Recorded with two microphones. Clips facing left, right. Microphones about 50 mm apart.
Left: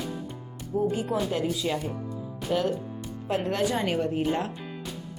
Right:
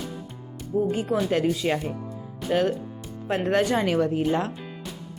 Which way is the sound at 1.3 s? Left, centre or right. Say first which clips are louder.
Right 4 dB; right.